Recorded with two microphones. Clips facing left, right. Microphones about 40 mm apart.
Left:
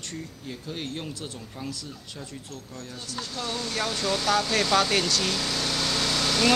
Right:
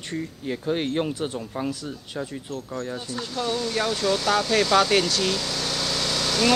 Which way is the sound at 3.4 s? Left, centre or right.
Centre.